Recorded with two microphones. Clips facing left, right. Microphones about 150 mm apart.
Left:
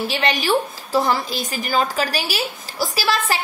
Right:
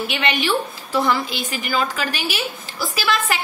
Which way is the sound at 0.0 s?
35° left (ahead or behind).